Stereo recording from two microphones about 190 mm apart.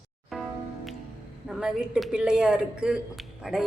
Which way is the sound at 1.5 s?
5° right (ahead or behind).